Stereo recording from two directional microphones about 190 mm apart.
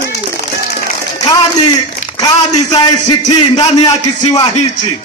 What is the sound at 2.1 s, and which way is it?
A man's voice, 20° left (ahead or behind).